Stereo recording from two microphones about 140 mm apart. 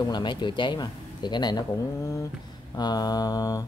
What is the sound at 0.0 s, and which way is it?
Speech, 30° left (ahead or behind).